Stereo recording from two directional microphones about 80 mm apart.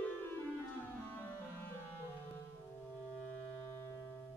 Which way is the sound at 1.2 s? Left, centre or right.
Left.